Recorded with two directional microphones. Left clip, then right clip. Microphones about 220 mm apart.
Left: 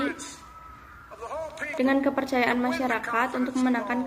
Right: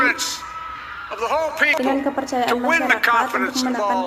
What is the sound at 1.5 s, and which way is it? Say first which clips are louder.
A man's voice: right 5 dB; 50° right (ahead or behind).